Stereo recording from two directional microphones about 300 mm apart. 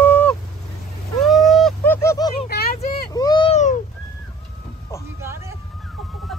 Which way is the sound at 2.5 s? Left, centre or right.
Left.